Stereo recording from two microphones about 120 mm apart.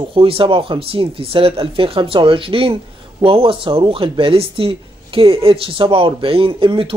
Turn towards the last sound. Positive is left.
turn(degrees=-50)  # may be behind; listen again after turning